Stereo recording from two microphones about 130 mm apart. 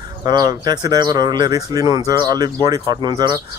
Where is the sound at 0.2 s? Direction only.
30° right (ahead or behind).